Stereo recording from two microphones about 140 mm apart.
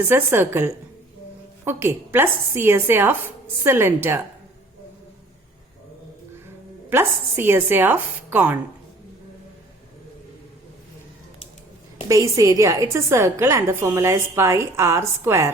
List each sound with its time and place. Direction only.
0.0 s speech: 15° right (ahead or behind)
6.9 s speech: 15° right (ahead or behind)
12.0 s a woman's voice: 25° right (ahead or behind)